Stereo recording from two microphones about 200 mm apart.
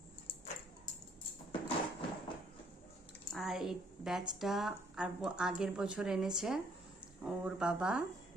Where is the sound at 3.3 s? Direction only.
Centre (ahead or behind).